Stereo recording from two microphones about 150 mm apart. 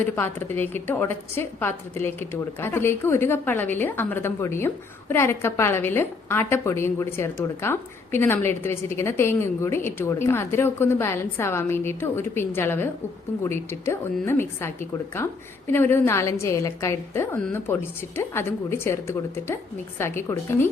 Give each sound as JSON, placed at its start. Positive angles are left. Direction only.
{"t": 0.0, "sound": "a woman's voice", "side_deg": 15}